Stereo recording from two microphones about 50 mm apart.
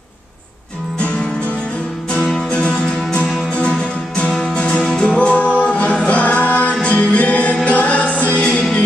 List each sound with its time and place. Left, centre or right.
2.5 s music: left